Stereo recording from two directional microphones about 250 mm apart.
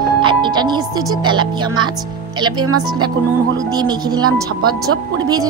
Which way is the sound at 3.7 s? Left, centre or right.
Centre.